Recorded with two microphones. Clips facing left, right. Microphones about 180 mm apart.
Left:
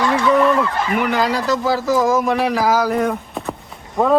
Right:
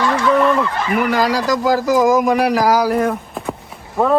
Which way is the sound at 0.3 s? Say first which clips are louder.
Even; centre (ahead or behind).